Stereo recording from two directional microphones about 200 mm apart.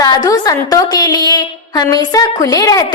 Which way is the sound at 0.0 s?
20° left (ahead or behind).